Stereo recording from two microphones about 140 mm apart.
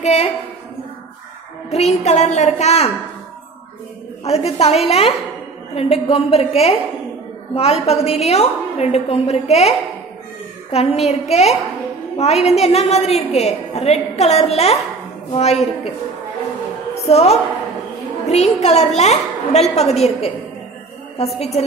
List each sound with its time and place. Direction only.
0.0 s a woman's voice: 50° left (ahead or behind)
1.7 s a woman's voice: 50° left (ahead or behind)
4.2 s a woman's voice: 45° left (ahead or behind)
16.9 s a woman's voice: 50° left (ahead or behind)
21.4 s a woman's voice: 50° left (ahead or behind)